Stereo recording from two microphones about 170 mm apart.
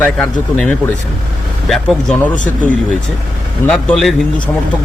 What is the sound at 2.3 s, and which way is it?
Speech, 50° left (ahead or behind).